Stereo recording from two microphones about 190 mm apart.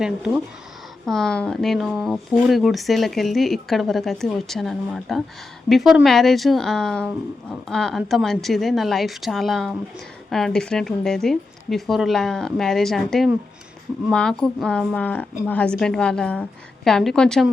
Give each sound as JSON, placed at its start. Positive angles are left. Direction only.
{"t": 0.0, "sound": "speech", "side_deg": -5}